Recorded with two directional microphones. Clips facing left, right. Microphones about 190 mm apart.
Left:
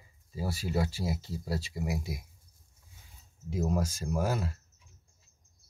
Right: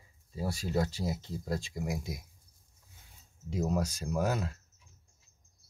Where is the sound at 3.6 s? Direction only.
45° left (ahead or behind).